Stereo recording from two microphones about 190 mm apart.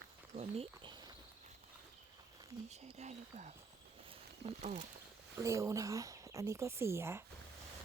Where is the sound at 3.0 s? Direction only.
40° right (ahead or behind).